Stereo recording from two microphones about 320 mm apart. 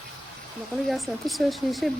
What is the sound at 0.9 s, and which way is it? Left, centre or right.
Speech, centre.